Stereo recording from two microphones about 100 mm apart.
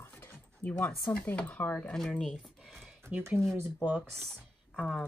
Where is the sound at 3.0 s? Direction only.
20° right (ahead or behind).